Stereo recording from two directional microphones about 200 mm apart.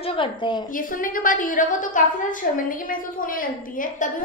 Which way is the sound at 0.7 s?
45° left (ahead or behind).